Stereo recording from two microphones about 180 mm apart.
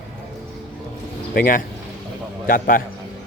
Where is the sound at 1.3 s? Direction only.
50° left (ahead or behind).